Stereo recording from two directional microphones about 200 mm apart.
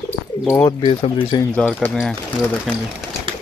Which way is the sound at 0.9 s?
25° left (ahead or behind).